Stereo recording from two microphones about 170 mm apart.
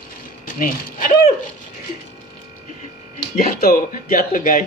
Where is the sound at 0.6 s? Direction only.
50° left (ahead or behind).